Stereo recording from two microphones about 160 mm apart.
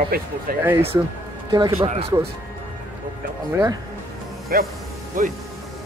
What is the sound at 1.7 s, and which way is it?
Speech, 40° right (ahead or behind).